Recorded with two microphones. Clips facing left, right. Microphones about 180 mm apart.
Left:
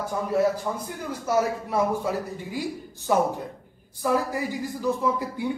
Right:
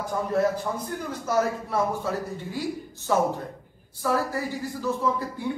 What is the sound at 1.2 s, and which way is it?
Speech, 10° left (ahead or behind).